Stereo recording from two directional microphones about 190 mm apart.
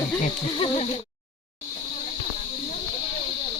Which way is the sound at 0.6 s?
25° left (ahead or behind).